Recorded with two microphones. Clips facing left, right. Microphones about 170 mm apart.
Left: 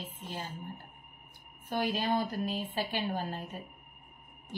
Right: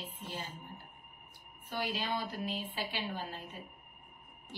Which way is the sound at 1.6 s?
50° left (ahead or behind).